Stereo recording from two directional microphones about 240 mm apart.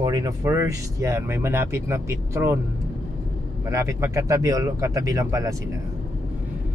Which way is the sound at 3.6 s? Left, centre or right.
Centre.